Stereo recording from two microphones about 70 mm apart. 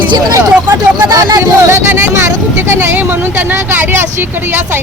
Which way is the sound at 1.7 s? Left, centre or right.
Right.